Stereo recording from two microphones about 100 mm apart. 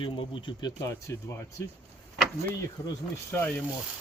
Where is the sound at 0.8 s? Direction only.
30° left (ahead or behind).